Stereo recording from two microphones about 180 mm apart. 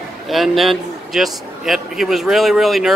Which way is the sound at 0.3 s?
Centre (ahead or behind).